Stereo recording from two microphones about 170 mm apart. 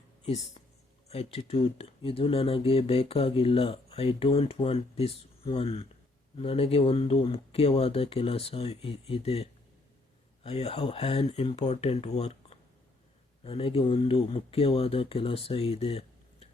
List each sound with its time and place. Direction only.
1.1 s speech: 35° left (ahead or behind)